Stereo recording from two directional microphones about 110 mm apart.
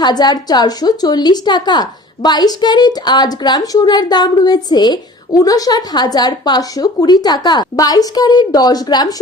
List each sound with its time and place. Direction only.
0.0 s a woman's voice: 40° left (ahead or behind)